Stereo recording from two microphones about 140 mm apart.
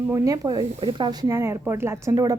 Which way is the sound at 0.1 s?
20° right (ahead or behind).